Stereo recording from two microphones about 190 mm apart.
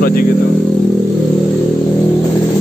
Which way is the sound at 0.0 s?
50° left (ahead or behind).